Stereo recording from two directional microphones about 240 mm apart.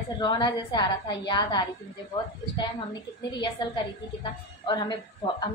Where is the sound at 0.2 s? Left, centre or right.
Centre.